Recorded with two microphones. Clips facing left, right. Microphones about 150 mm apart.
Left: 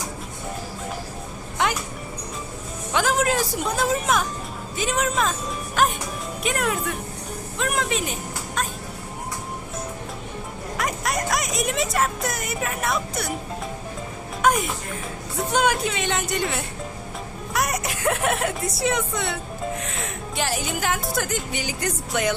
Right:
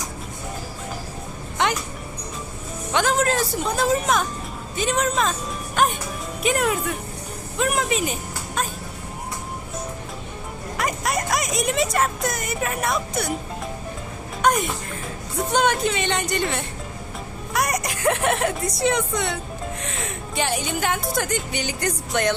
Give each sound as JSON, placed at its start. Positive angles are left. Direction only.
{"t": 2.9, "sound": "a woman's voice", "side_deg": 5}
{"t": 10.8, "sound": "speech", "side_deg": 0}
{"t": 14.4, "sound": "music", "side_deg": 5}
{"t": 15.4, "sound": "a woman's voice", "side_deg": 5}